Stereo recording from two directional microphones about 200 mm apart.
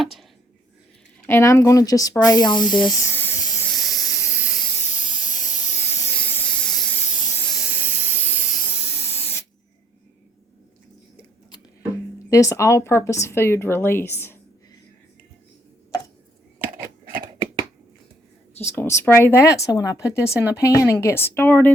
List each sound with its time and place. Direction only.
0.0 s a sound: centre (ahead or behind)
1.3 s speech: 15° left (ahead or behind)
3.7 s hiss: centre (ahead or behind)
5.2 s steam: 20° left (ahead or behind); by 7.0 s 5° left (ahead or behind)
7.5 s steam: 5° right (ahead or behind)
9.0 s spray: 10° left (ahead or behind)
12.3 s speech: 15° left (ahead or behind)
18.6 s speech: 15° left (ahead or behind)